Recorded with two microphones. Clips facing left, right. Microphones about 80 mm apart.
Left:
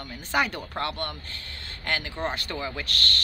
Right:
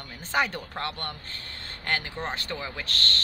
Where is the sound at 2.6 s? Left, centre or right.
Centre.